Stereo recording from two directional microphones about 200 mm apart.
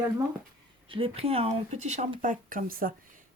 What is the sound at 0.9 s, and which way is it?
Speech, 30° right (ahead or behind).